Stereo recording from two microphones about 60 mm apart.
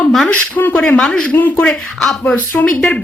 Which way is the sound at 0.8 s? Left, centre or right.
Centre.